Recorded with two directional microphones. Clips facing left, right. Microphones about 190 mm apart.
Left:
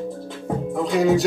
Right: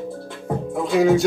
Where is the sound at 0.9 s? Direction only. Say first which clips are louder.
Right 2 dB; centre (ahead or behind).